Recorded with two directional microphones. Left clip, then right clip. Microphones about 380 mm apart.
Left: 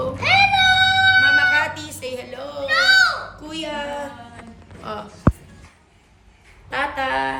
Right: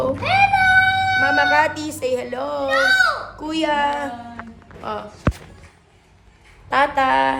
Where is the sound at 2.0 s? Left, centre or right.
Right.